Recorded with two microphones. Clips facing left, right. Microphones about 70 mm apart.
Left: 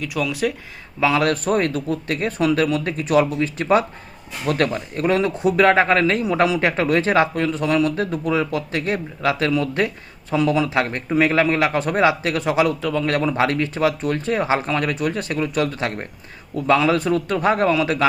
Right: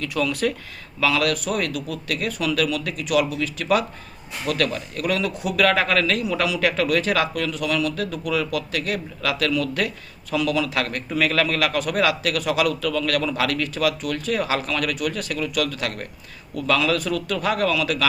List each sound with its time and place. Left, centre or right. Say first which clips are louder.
0.0 s speech: left 1 dB; centre
0.9 s a man's voice: left 3 dB; left